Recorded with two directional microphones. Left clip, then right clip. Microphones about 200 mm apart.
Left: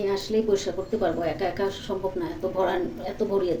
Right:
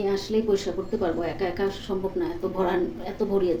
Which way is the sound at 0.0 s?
5° right (ahead or behind).